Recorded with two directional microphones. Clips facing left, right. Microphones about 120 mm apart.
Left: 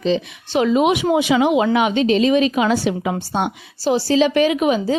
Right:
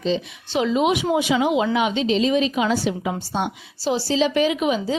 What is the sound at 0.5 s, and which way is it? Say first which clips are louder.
A woman's voice: left 4 dB; 55° left (ahead or behind).